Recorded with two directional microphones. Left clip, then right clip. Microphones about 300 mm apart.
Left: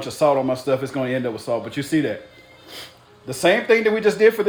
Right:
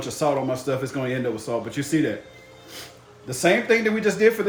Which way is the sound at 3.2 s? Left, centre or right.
Left.